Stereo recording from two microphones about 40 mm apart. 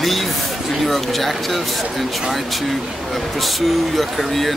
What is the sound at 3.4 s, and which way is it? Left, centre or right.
Speech, centre.